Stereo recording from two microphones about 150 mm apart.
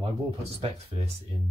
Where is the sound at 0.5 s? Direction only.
45° right (ahead or behind).